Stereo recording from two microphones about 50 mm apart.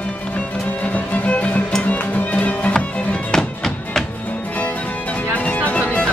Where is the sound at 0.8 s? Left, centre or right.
Left.